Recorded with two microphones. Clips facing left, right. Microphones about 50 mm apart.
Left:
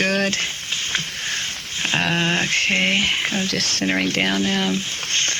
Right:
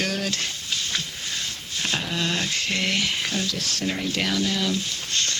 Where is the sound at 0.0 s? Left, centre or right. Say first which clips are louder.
Left 6 dB; left.